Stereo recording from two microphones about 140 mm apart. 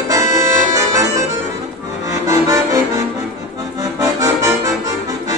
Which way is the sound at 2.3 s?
25° right (ahead or behind).